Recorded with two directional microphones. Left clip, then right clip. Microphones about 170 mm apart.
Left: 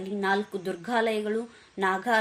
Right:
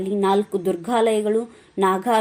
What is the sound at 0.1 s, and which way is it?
A woman's voice, 20° right (ahead or behind).